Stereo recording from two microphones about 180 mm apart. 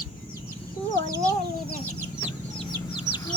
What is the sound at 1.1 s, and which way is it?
Chicken, 15° right (ahead or behind).